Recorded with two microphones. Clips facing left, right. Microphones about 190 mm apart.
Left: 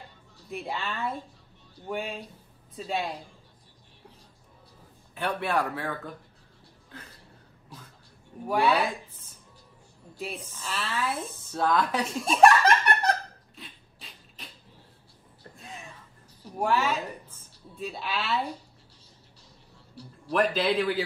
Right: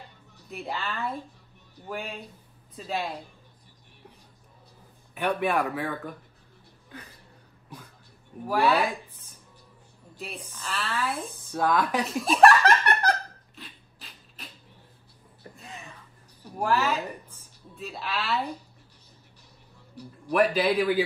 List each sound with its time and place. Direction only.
0.5 s a woman's voice: centre (ahead or behind)
5.1 s speech: 15° right (ahead or behind)
8.5 s a woman's voice: centre (ahead or behind)
10.1 s a woman's voice: centre (ahead or behind)
11.5 s speech: 10° right (ahead or behind)
12.0 s laughter: centre (ahead or behind)
13.6 s a sound: centre (ahead or behind)
15.5 s a sound: centre (ahead or behind)
16.4 s a woman's voice: centre (ahead or behind)
20.0 s speech: 10° right (ahead or behind)